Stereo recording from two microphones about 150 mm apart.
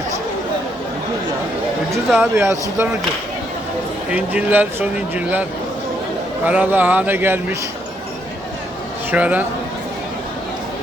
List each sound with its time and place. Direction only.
2.0 s speech: centre (ahead or behind)
2.3 s speech: 20° right (ahead or behind)
4.1 s speech: 10° right (ahead or behind)
9.1 s speech: 10° right (ahead or behind)